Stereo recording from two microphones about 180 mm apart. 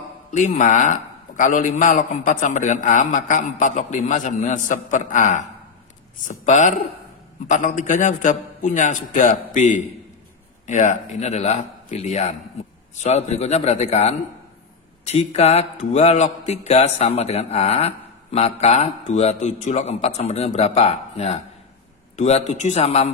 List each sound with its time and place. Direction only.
0.3 s a man's voice: 45° left (ahead or behind)